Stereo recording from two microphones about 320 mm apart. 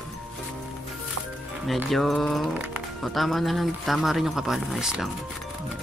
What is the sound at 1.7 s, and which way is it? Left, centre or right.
Speech, centre.